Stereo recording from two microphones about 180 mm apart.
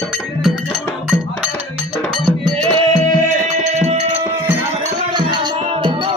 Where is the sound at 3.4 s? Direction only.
40° right (ahead or behind).